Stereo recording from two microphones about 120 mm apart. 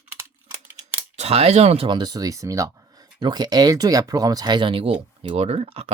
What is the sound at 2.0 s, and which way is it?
Speech, 30° right (ahead or behind).